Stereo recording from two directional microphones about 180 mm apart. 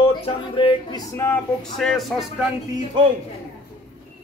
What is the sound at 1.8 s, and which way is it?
Speech, centre (ahead or behind).